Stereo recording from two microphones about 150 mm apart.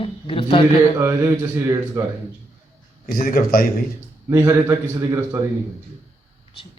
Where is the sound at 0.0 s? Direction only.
40° left (ahead or behind).